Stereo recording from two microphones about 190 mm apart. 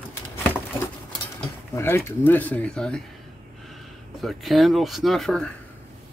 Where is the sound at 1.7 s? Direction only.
15° left (ahead or behind).